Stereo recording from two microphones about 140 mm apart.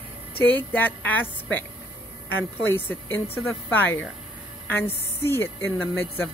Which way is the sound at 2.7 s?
15° left (ahead or behind).